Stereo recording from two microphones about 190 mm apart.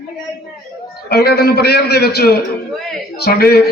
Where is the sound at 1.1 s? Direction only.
55° left (ahead or behind).